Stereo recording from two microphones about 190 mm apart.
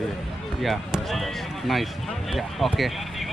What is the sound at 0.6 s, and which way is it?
A man's voice, centre (ahead or behind).